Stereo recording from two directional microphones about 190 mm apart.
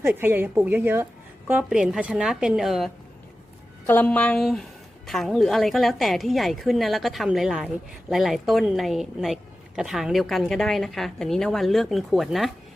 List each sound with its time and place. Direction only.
0.0 s a woman's voice: 10° right (ahead or behind)
3.8 s a woman's voice: 10° left (ahead or behind)